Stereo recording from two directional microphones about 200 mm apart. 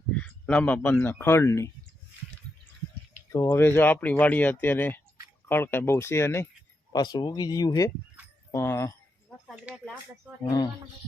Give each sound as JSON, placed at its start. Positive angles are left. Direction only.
{"t": 0.1, "sound": "speech", "side_deg": 5}
{"t": 3.3, "sound": "speech", "side_deg": 15}
{"t": 9.5, "sound": "speech", "side_deg": -5}